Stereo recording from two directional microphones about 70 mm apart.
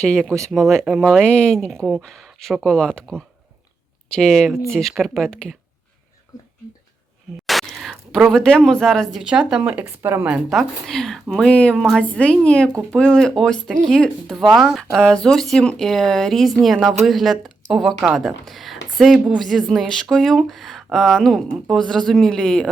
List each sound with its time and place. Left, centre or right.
0.0 s speech: centre
1.2 s speech: centre
7.4 s a sound: centre
8.3 s speech: centre
9.1 s speech: centre
9.8 s speech: right
10.5 s speech: centre